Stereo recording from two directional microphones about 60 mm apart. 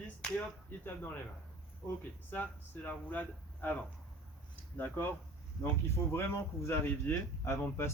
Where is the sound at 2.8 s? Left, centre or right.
Left.